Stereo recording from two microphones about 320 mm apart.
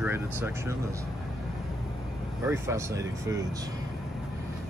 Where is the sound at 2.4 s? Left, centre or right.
Centre.